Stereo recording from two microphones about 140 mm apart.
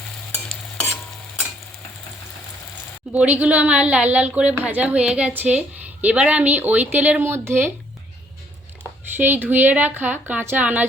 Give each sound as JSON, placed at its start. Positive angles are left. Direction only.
{"t": 3.1, "sound": "a woman's voice", "side_deg": -10}
{"t": 9.1, "sound": "a woman's voice", "side_deg": -15}